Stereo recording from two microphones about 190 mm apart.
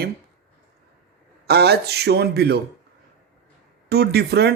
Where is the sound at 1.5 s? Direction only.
60° right (ahead or behind).